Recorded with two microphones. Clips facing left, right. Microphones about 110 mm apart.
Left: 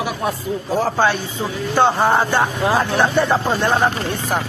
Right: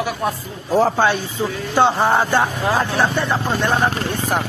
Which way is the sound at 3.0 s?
20° left (ahead or behind).